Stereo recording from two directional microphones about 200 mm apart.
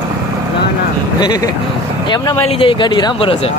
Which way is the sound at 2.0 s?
20° left (ahead or behind).